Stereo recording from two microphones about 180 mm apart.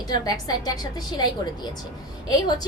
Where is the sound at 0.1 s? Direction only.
20° left (ahead or behind).